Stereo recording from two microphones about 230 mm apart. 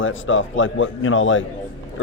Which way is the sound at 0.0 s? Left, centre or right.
Left.